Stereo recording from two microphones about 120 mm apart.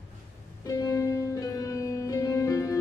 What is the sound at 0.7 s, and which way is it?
Music, 30° left (ahead or behind).